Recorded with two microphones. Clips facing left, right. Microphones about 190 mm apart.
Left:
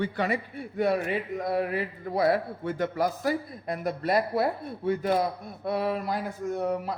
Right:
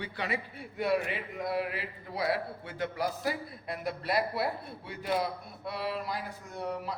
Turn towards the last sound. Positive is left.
turn(degrees=50)  # may be behind; listen again after turning